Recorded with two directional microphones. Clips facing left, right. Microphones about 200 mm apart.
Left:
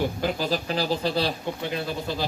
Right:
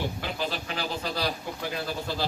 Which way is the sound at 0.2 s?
35° left (ahead or behind).